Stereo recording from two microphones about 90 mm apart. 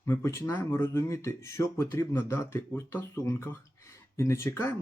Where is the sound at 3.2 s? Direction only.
35° left (ahead or behind).